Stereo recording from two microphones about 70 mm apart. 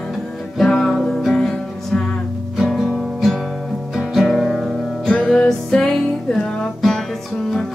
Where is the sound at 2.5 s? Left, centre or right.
Centre.